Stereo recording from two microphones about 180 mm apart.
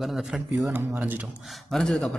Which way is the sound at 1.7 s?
Centre (ahead or behind).